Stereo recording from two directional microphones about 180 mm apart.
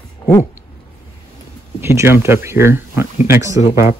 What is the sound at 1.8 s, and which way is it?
Speech, 15° right (ahead or behind).